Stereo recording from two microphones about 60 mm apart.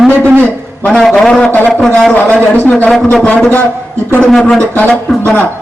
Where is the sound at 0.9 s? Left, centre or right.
Centre.